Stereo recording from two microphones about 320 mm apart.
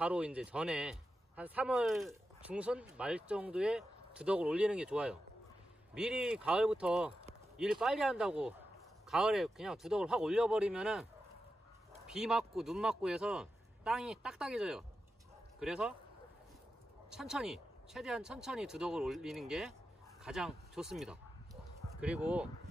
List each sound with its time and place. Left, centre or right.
0.0 s speech: centre
12.1 s speech: centre
17.1 s speech: centre